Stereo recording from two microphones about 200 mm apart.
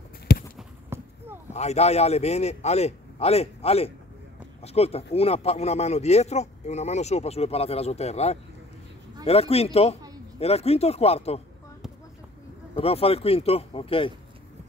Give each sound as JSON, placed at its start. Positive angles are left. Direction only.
{"t": 0.3, "sound": "a sound", "side_deg": 55}
{"t": 0.8, "sound": "clip-clop", "side_deg": -10}
{"t": 1.5, "sound": "speech", "side_deg": 35}
{"t": 12.7, "sound": "speech", "side_deg": 30}